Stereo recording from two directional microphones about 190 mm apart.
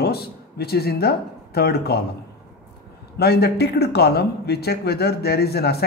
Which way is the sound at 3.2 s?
60° left (ahead or behind).